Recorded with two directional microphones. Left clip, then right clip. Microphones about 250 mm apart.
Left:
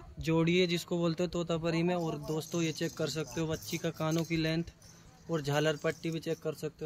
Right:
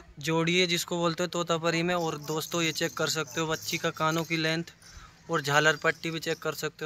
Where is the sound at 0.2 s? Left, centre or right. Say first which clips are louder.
Right 3 dB; centre.